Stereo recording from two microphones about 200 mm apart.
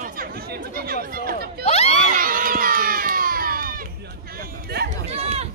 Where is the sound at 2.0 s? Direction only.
45° right (ahead or behind).